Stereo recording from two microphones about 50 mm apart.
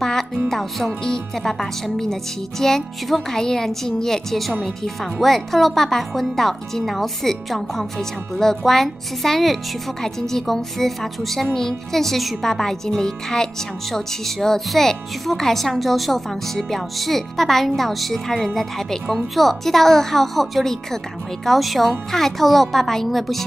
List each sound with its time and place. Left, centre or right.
0.0 s music: centre
0.5 s speech: centre